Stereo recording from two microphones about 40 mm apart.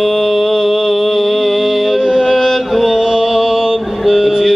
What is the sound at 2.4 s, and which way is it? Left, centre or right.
Music, centre.